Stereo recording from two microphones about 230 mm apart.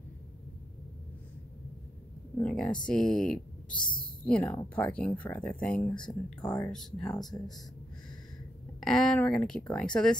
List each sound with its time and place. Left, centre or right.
2.3 s speech: centre
6.4 s speech: centre
6.7 s speech: centre
8.8 s speech: centre